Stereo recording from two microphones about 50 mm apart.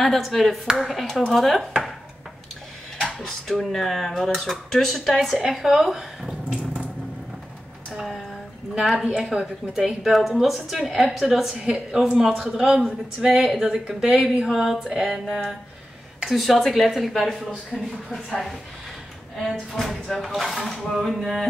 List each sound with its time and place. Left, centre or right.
0.0 s speech: centre
3.0 s speech: centre
8.9 s speech: centre
9.8 s speech: centre
19.7 s speech: centre